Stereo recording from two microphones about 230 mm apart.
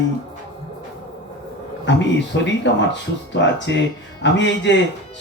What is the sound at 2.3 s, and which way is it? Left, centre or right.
A man's voice, left.